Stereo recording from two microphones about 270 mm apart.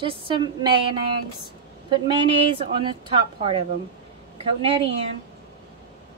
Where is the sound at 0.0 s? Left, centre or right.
Centre.